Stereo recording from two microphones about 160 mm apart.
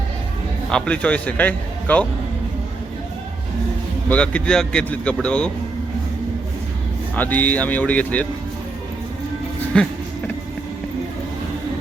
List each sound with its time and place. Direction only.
0.7 s a man's voice: 5° left (ahead or behind)
4.1 s a man's voice: 10° left (ahead or behind)
7.2 s a man's voice: 10° left (ahead or behind)
9.7 s a man's voice: 5° left (ahead or behind)